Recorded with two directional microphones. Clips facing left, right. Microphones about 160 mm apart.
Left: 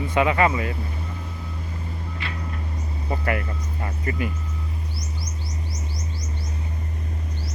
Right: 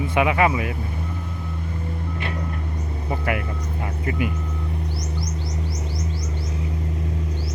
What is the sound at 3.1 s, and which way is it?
Speech, 15° right (ahead or behind).